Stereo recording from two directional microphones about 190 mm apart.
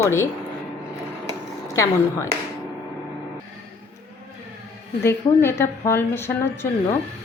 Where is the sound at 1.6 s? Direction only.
15° left (ahead or behind).